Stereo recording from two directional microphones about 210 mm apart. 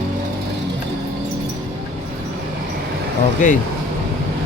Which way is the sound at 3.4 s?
35° left (ahead or behind).